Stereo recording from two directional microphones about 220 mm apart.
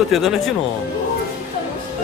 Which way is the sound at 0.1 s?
Centre (ahead or behind).